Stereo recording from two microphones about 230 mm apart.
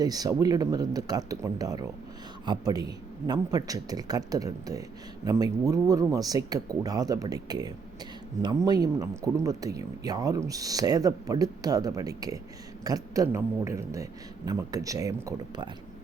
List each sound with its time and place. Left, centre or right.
0.0 s speech: centre